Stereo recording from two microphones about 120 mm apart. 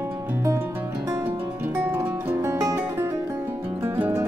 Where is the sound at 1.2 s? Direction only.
15° right (ahead or behind).